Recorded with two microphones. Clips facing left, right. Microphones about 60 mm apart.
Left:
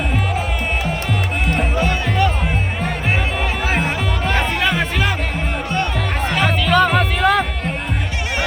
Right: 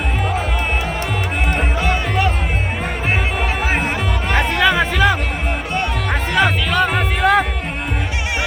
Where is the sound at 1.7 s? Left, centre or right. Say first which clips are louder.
Even; centre.